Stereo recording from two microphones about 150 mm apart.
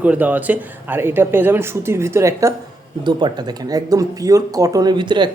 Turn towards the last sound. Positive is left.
turn(degrees=-30)  # may be behind; listen again after turning